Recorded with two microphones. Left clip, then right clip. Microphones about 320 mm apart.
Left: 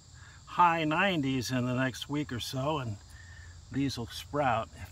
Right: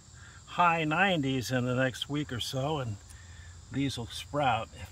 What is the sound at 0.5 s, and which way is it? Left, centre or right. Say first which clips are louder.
Speech: left 1 dB; centre.